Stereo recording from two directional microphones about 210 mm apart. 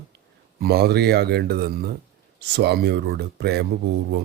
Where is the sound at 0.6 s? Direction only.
50° right (ahead or behind).